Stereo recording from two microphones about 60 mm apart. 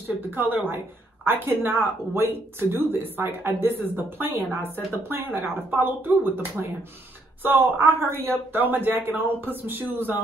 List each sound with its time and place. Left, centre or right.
0.3 s speech: right